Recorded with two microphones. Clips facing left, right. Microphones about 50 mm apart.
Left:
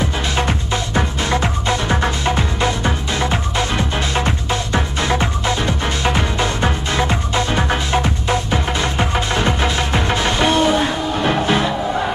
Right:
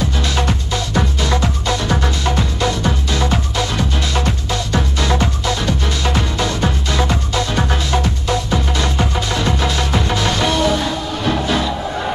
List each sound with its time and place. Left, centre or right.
0.0 s music: left